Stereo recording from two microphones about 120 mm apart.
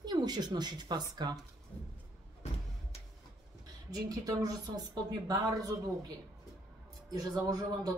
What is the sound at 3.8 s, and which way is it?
Speech, 30° right (ahead or behind).